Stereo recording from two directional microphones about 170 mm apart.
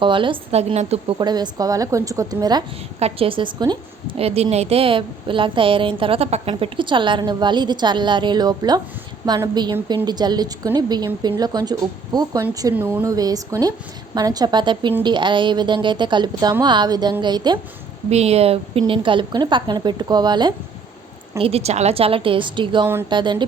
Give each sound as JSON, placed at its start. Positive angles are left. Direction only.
{"t": 0.0, "sound": "a woman's voice", "side_deg": -30}
{"t": 1.2, "sound": "a woman's voice", "side_deg": -25}
{"t": 10.1, "sound": "a woman's voice", "side_deg": -25}
{"t": 12.7, "sound": "a woman's voice", "side_deg": -10}
{"t": 18.1, "sound": "a woman's voice", "side_deg": -40}